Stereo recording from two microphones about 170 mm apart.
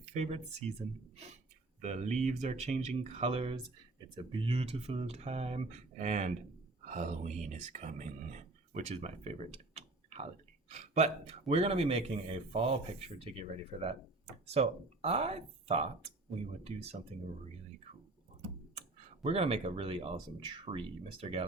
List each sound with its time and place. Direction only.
0.0 s speech: 40° right (ahead or behind)
19.2 s speech: 35° right (ahead or behind)